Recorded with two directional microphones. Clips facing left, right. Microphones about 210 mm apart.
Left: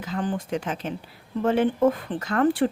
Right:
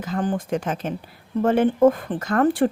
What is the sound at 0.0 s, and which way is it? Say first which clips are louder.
A woman's voice: right 3 dB; 45° right (ahead or behind).